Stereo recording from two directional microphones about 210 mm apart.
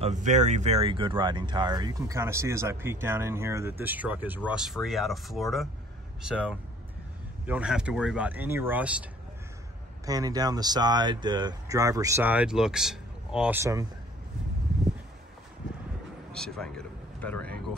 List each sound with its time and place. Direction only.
0.0 s speech: 35° right (ahead or behind); by 8.9 s 10° right (ahead or behind)
10.0 s speech: 15° right (ahead or behind)
16.3 s speech: 5° left (ahead or behind)